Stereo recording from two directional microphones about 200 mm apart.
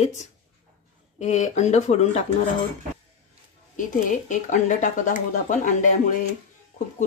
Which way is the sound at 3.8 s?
40° left (ahead or behind).